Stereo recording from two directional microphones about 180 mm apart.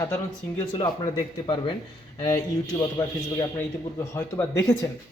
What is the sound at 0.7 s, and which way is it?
Speech, 25° left (ahead or behind).